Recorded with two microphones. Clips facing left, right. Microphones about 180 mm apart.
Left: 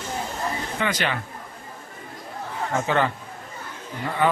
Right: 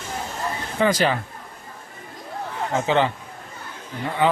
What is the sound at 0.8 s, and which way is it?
Speech, 40° right (ahead or behind).